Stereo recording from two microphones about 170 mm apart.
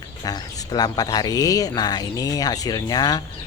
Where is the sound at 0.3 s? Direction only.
25° left (ahead or behind).